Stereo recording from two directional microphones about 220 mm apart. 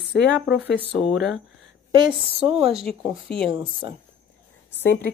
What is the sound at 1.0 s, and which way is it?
Speech, centre (ahead or behind).